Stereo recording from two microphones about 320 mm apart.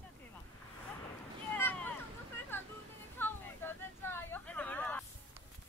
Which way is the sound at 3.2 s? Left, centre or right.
Centre.